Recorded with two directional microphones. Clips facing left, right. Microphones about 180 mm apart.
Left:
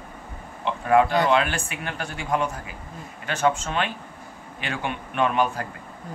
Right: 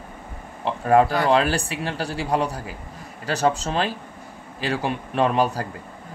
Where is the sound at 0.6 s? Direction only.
35° right (ahead or behind).